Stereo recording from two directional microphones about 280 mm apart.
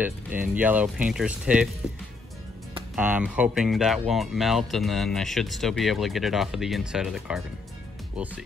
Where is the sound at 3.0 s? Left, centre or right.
Centre.